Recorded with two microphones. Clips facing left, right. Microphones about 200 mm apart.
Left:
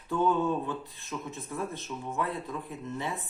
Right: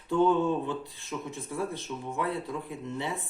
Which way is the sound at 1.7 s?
15° right (ahead or behind).